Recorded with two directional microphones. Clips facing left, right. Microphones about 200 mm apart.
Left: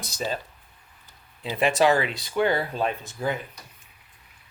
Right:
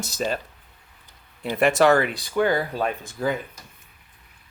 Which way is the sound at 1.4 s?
60° right (ahead or behind).